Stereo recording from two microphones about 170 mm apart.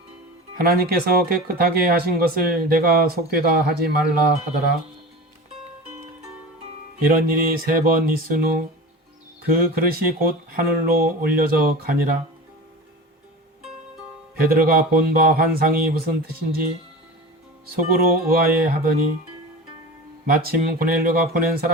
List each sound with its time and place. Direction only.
0.5 s speech: 65° right (ahead or behind)
7.1 s speech: 60° right (ahead or behind)
14.3 s speech: 60° right (ahead or behind)
17.7 s speech: 55° right (ahead or behind)
20.2 s speech: 60° right (ahead or behind)